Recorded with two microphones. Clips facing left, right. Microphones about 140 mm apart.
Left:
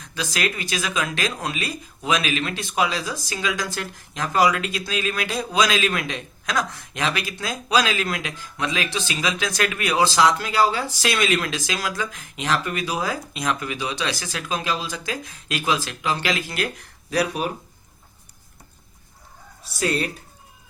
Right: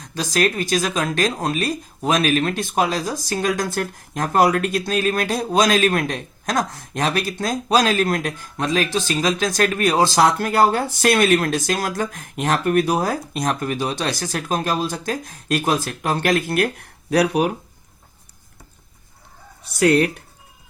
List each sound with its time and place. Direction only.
0.0 s a man's voice: 45° right (ahead or behind); by 17.5 s 65° right (ahead or behind)
19.7 s speech: 70° right (ahead or behind)